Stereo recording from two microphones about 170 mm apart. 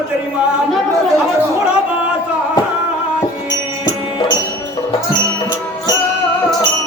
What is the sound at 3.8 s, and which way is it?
Music, 25° left (ahead or behind).